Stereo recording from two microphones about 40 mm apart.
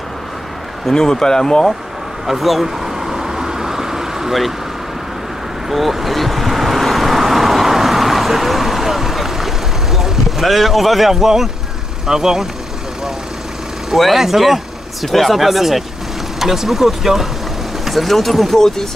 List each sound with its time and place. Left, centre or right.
0.9 s speech: centre
2.2 s vehicle: centre
5.7 s vehicle: centre
12.1 s speech: centre
13.8 s speech: centre